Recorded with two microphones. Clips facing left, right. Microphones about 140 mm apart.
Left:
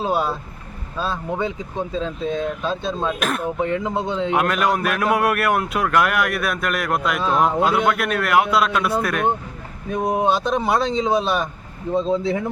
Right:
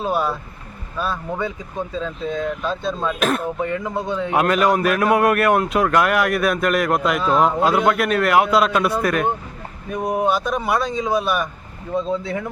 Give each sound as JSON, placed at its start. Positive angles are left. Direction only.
{"t": 0.0, "sound": "speech", "side_deg": 25}
{"t": 3.2, "sound": "speech", "side_deg": 0}
{"t": 3.6, "sound": "speech", "side_deg": 20}
{"t": 4.4, "sound": "speech", "side_deg": 0}
{"t": 9.9, "sound": "speech", "side_deg": 20}